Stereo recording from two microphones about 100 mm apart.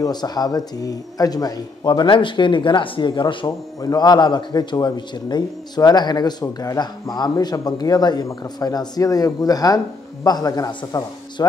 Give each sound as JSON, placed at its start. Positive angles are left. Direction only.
{"t": 0.0, "sound": "speech", "side_deg": 45}
{"t": 3.4, "sound": "speech", "side_deg": 40}